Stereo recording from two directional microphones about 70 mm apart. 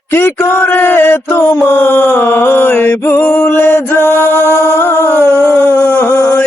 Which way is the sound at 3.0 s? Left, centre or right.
Left.